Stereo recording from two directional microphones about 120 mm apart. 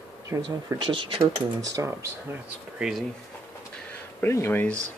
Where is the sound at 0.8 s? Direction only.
45° right (ahead or behind).